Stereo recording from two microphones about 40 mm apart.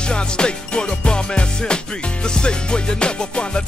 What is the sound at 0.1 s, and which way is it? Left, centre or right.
Music, left.